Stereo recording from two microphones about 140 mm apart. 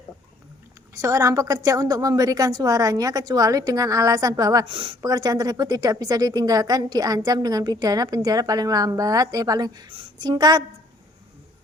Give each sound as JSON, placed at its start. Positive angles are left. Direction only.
{"t": 0.9, "sound": "a woman's voice", "side_deg": -20}
{"t": 4.6, "sound": "a woman's voice", "side_deg": -35}